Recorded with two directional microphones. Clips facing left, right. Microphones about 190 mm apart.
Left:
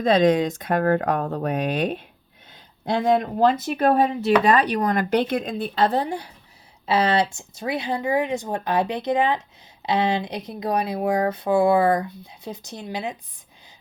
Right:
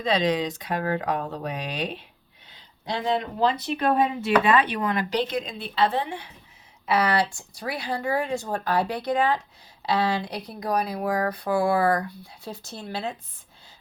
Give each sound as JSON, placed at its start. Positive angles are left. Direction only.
{"t": 0.0, "sound": "speech", "side_deg": 50}
{"t": 6.8, "sound": "speech", "side_deg": 25}